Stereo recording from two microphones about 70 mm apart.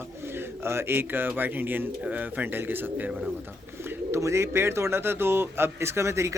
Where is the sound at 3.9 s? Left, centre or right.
Right.